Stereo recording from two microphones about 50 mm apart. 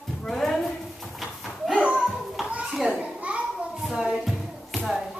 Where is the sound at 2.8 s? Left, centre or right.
Right.